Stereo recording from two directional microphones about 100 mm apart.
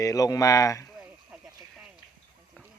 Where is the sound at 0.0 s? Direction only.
35° left (ahead or behind).